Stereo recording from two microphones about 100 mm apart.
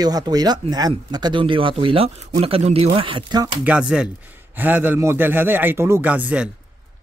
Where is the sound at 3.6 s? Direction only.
10° right (ahead or behind).